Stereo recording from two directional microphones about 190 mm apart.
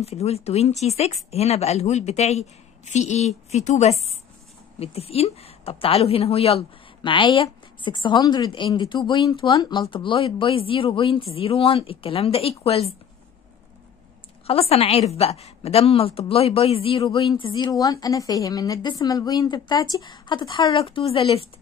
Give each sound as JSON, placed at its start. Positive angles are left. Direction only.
{"t": 0.0, "sound": "a woman's voice", "side_deg": 35}
{"t": 14.4, "sound": "a woman's voice", "side_deg": 30}